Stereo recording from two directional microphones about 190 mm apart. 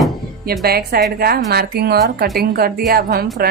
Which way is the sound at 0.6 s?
55° right (ahead or behind).